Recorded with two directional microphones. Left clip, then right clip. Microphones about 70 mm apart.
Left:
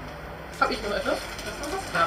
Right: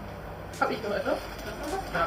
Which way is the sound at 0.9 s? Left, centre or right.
Centre.